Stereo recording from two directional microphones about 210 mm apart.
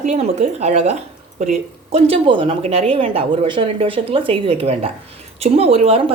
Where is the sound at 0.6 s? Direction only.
30° right (ahead or behind).